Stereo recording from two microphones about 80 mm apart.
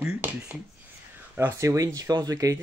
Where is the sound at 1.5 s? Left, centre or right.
Right.